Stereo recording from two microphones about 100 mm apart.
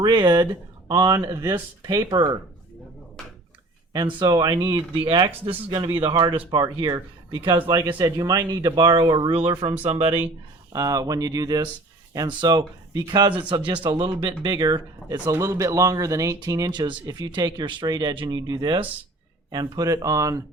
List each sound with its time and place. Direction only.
0.0 s speech: 50° right (ahead or behind)
0.9 s speech: 40° right (ahead or behind)
4.0 s speech: 45° right (ahead or behind)
9.3 s speech: 55° right (ahead or behind)
9.8 s speech: 90° right
10.7 s speech: 40° right (ahead or behind)
15.3 s speech: 30° right (ahead or behind)